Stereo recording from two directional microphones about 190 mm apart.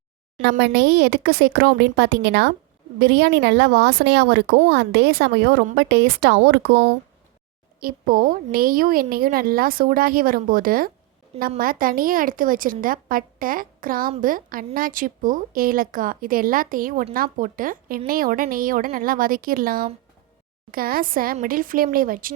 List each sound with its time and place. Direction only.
0.6 s a woman's voice: 60° right (ahead or behind)
7.8 s a woman's voice: 50° right (ahead or behind)